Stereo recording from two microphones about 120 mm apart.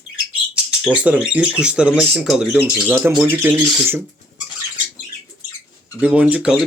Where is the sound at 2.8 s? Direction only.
20° right (ahead or behind).